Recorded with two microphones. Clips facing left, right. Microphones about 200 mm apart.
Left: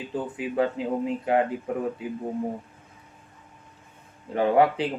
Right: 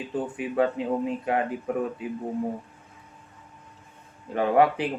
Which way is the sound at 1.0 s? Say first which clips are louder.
Left 3 dB; 25° left (ahead or behind).